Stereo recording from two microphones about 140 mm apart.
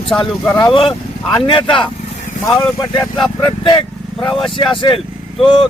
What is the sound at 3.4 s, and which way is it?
Speech, 35° left (ahead or behind).